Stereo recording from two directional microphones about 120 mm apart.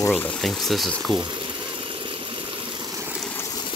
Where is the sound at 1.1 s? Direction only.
40° right (ahead or behind).